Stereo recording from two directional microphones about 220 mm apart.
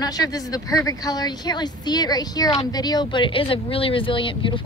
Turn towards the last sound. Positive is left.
turn(degrees=25)  # may be behind; listen again after turning